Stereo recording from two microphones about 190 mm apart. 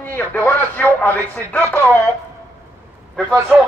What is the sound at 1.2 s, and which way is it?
Chopping, 15° right (ahead or behind).